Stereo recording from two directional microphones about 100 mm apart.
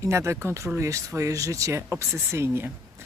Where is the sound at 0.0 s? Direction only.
30° right (ahead or behind).